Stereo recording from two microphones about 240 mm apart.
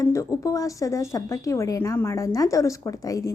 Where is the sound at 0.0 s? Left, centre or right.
Centre.